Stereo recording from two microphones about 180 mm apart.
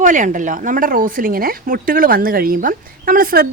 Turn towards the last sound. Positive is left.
turn(degrees=-55)  # may be behind; listen again after turning